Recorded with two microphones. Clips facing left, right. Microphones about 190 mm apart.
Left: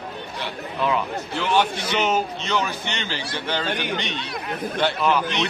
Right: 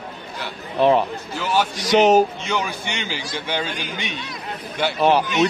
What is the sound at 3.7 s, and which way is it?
Speech, 65° left (ahead or behind).